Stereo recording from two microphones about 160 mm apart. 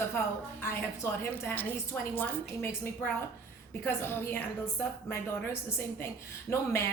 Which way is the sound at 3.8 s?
15° left (ahead or behind).